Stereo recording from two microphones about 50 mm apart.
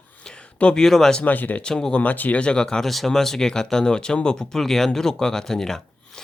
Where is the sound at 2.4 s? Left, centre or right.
Centre.